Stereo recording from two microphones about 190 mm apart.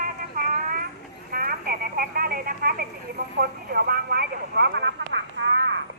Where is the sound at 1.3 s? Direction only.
50° right (ahead or behind); by 5.8 s 70° right (ahead or behind).